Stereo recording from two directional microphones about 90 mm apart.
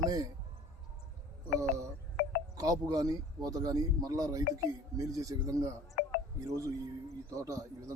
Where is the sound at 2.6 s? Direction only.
40° right (ahead or behind).